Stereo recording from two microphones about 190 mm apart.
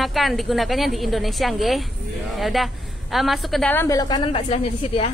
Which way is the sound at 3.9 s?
20° left (ahead or behind).